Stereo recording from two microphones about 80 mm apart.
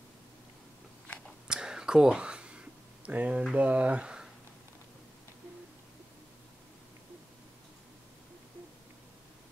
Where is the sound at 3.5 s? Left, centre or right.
Centre.